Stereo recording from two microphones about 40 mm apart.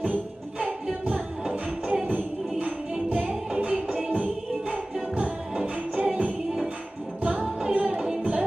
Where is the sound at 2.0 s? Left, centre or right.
Right.